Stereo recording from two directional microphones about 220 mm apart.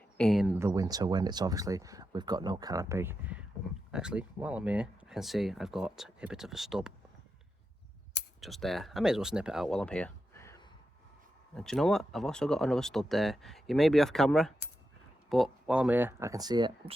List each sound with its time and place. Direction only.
0.2 s speech: centre (ahead or behind)
0.6 s speech: 15° right (ahead or behind)
8.4 s speech: centre (ahead or behind)
11.5 s speech: centre (ahead or behind); by 16.9 s 20° right (ahead or behind)